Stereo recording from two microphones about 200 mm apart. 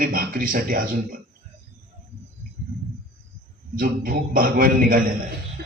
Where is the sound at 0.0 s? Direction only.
45° right (ahead or behind).